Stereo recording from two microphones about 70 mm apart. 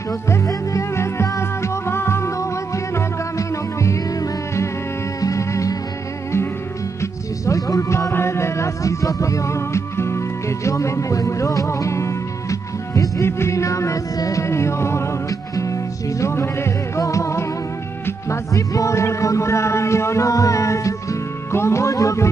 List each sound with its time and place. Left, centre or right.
0.3 s music: left
7.0 s music: left
8.1 s music: left